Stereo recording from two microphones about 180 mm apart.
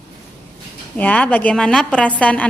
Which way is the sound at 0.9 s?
10° left (ahead or behind).